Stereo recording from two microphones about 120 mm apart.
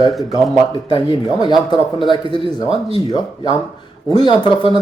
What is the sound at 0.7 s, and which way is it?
A man's voice, 40° left (ahead or behind).